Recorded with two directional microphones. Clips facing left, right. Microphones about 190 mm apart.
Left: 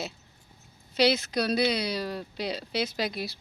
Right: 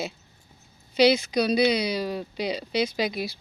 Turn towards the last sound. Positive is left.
turn(degrees=0)  # may be behind; listen again after turning